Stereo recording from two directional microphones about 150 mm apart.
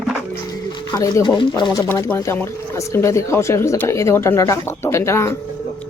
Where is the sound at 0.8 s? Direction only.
25° left (ahead or behind).